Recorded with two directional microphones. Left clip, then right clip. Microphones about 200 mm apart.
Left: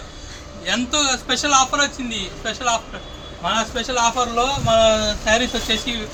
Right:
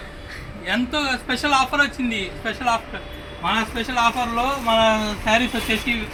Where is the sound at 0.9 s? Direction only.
Centre (ahead or behind).